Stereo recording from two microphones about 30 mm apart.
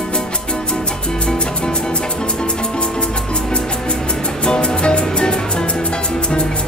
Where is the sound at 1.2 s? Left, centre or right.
Left.